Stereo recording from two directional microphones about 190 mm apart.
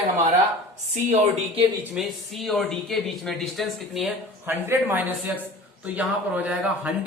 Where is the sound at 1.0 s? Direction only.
35° right (ahead or behind).